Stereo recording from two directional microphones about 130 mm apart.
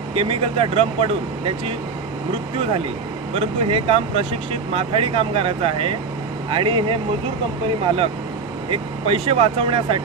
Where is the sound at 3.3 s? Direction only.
50° right (ahead or behind).